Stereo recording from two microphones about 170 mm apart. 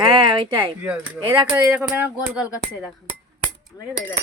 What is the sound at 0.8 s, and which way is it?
Speech, 10° right (ahead or behind).